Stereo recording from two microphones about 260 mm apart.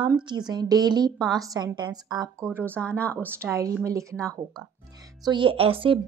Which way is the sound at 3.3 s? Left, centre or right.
Centre.